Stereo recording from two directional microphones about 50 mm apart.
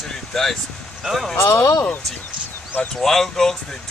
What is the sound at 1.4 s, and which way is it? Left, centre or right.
Speech, left.